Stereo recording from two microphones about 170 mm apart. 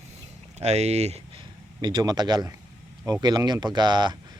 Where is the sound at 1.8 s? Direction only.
25° right (ahead or behind).